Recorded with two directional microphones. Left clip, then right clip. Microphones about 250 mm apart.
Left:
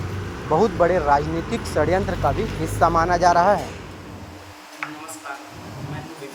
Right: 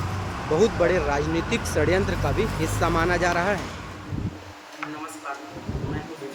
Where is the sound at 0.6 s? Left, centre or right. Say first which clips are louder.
Left 2 dB; centre.